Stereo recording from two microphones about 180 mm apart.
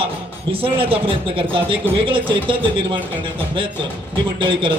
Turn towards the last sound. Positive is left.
turn(degrees=-30)  # may be behind; listen again after turning